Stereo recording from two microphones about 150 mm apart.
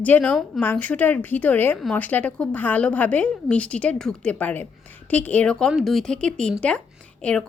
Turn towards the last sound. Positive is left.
turn(degrees=5)  # may be behind; listen again after turning